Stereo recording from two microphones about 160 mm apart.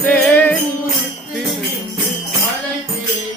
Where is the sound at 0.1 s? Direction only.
10° left (ahead or behind).